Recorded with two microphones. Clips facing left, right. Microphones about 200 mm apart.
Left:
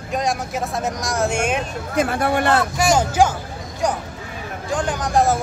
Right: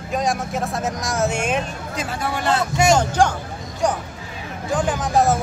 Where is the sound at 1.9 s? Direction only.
60° left (ahead or behind).